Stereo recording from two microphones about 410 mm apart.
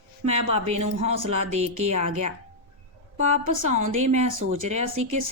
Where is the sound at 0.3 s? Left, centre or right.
Centre.